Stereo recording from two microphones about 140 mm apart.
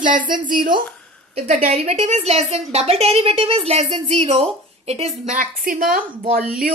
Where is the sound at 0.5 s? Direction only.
35° right (ahead or behind).